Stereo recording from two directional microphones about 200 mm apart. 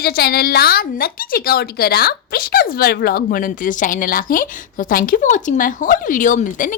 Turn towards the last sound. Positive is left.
turn(degrees=40)  # may be behind; listen again after turning